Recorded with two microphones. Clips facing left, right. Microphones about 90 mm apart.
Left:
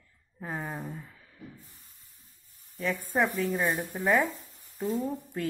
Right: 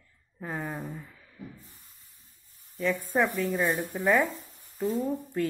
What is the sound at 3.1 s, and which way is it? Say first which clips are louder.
Speech: left 1 dB; 15° left (ahead or behind).